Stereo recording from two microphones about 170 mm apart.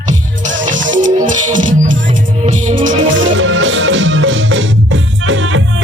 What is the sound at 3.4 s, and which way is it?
Music, 90° right.